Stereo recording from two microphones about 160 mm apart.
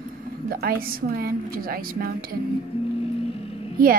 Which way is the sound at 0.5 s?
70° right (ahead or behind).